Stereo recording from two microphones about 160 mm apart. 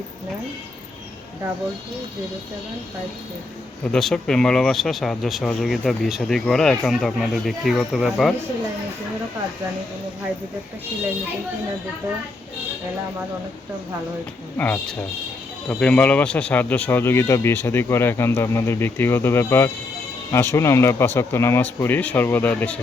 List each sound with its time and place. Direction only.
3.8 s speech: 5° left (ahead or behind)
15.7 s speech: 10° left (ahead or behind)